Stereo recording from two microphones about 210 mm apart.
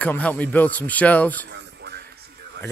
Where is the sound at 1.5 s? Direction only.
55° right (ahead or behind).